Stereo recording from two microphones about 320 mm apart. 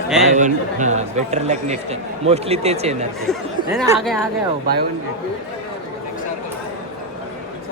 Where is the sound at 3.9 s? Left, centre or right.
Centre.